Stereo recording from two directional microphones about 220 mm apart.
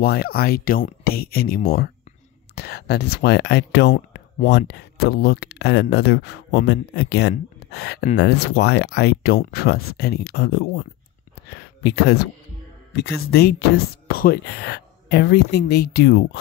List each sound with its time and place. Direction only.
0.0 s speech: 45° left (ahead or behind)